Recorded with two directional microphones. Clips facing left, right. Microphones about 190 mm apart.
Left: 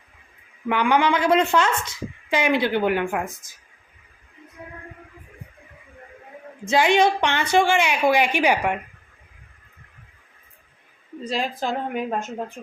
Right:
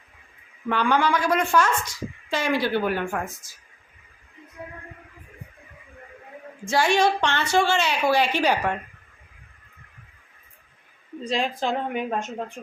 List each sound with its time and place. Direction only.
0.7 s a woman's voice: 15° left (ahead or behind)
6.7 s a woman's voice: 20° left (ahead or behind)
11.2 s a woman's voice: 5° left (ahead or behind)